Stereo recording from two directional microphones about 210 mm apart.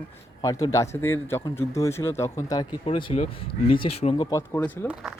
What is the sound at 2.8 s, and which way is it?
Speech, 30° left (ahead or behind).